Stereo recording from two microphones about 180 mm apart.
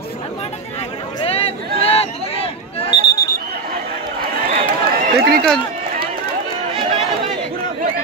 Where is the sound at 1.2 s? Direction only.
35° left (ahead or behind).